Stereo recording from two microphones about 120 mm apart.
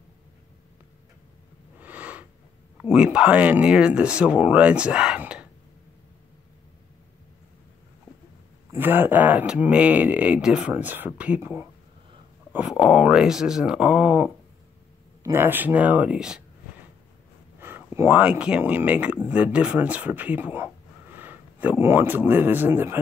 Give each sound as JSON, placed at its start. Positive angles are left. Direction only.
{"t": 1.8, "sound": "a sound", "side_deg": -15}
{"t": 2.8, "sound": "speech", "side_deg": -10}
{"t": 8.7, "sound": "speech", "side_deg": -15}
{"t": 12.5, "sound": "speech", "side_deg": -5}
{"t": 17.6, "sound": "speech", "side_deg": -20}